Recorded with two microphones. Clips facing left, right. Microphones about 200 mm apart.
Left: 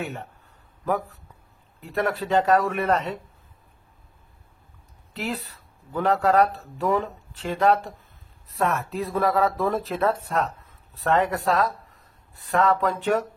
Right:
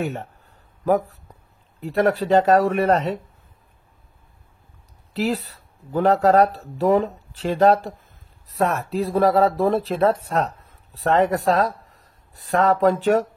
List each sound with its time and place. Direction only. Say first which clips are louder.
1.8 s speech: right 6 dB; 35° right (ahead or behind)
5.2 s speech: right 7 dB; 40° right (ahead or behind)